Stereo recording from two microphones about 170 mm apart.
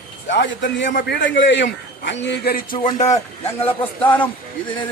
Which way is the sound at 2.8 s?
45° left (ahead or behind).